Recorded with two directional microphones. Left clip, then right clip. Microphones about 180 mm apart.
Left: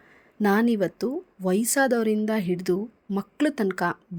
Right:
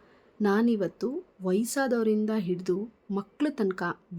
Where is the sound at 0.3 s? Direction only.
20° left (ahead or behind).